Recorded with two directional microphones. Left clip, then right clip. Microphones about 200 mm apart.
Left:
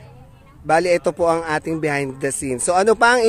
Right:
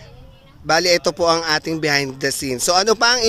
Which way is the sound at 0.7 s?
Centre (ahead or behind).